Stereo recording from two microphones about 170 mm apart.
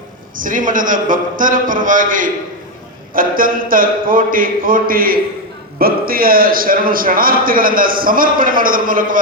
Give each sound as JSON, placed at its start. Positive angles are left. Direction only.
{"t": 0.3, "sound": "a man's voice", "side_deg": -50}